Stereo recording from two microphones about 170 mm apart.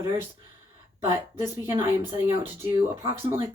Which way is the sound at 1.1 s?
15° right (ahead or behind).